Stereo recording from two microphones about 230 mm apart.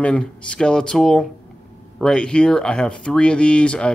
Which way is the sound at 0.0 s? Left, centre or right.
Centre.